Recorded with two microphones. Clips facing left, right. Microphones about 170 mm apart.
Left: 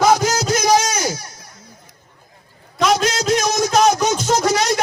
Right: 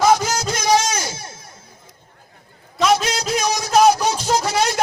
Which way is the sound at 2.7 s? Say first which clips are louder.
Left 1 dB; 5° right (ahead or behind).